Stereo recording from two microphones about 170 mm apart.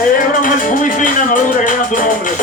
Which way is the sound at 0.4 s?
50° left (ahead or behind).